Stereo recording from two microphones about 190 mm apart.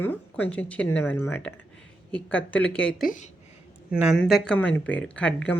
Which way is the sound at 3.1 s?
40° left (ahead or behind).